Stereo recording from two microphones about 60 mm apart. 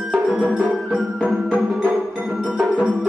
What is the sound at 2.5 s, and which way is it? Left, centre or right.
Music, right.